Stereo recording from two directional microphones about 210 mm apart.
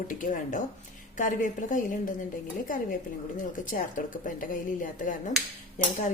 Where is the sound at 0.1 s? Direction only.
40° left (ahead or behind).